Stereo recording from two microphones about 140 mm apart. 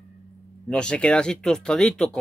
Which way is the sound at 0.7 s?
5° left (ahead or behind).